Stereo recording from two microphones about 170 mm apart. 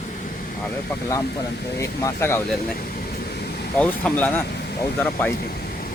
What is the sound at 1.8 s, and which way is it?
Speech, 15° left (ahead or behind).